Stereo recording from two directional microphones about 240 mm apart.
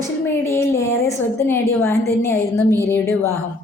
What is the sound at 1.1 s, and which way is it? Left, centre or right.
A woman's voice, centre.